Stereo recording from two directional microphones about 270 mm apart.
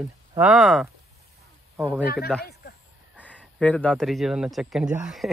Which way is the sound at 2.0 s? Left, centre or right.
Left.